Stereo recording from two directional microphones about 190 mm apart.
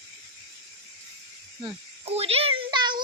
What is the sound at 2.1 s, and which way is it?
Speech, 30° right (ahead or behind).